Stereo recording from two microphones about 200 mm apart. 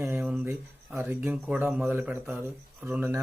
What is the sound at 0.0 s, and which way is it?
Speech, 10° right (ahead or behind).